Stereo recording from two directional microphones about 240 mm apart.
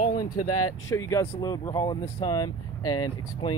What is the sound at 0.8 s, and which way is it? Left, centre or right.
Speech, centre.